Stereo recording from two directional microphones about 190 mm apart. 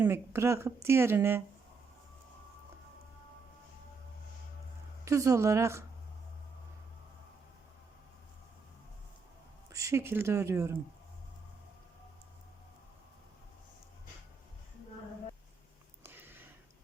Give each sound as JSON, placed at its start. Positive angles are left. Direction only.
{"t": 0.0, "sound": "speech", "side_deg": -15}
{"t": 5.0, "sound": "speech", "side_deg": -15}
{"t": 9.7, "sound": "speech", "side_deg": -15}
{"t": 16.0, "sound": "sniff", "side_deg": -10}